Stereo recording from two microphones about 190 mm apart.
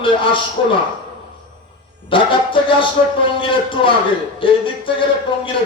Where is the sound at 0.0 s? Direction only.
25° left (ahead or behind).